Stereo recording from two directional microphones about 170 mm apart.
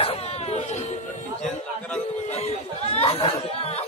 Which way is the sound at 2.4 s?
35° left (ahead or behind).